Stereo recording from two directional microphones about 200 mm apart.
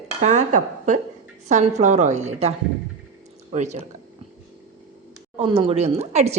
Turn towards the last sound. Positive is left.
turn(degrees=-35)  # may be behind; listen again after turning